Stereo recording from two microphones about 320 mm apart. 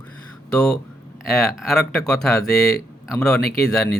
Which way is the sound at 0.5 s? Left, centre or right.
Centre.